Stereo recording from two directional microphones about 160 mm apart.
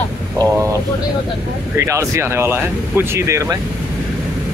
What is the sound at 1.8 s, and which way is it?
Speech, 15° right (ahead or behind).